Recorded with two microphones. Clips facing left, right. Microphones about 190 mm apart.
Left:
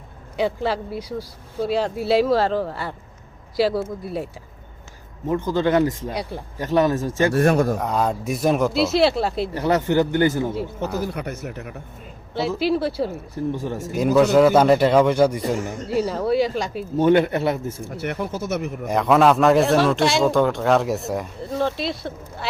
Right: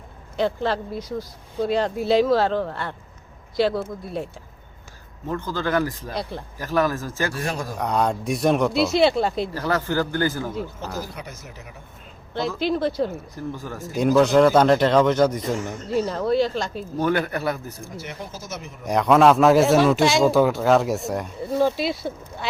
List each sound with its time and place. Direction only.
0.3 s a man's voice: 10° left (ahead or behind)
5.3 s a man's voice: 20° left (ahead or behind)
7.3 s speech: 60° left (ahead or behind)
7.8 s a man's voice: centre (ahead or behind)
9.5 s a man's voice: 20° left (ahead or behind)
11.0 s speech: 60° left (ahead or behind)
12.3 s a man's voice: 5° left (ahead or behind)
13.1 s a man's voice: 25° left (ahead or behind)
13.9 s a man's voice: 5° left (ahead or behind)
17.0 s a man's voice: 25° left (ahead or behind)
17.8 s speech: 60° left (ahead or behind)
18.9 s a man's voice: centre (ahead or behind)